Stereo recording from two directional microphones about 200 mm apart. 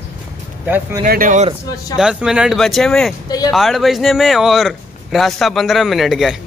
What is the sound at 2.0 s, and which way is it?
A man's voice, 5° right (ahead or behind).